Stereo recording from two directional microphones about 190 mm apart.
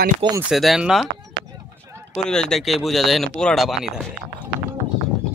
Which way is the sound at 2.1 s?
5° left (ahead or behind).